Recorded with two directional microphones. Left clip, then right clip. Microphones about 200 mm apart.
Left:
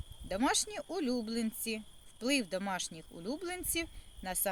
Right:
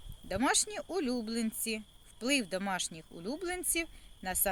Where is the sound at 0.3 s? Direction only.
20° right (ahead or behind).